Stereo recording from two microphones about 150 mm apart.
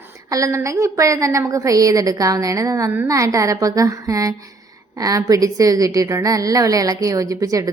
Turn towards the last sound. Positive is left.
turn(degrees=-20)  # may be behind; listen again after turning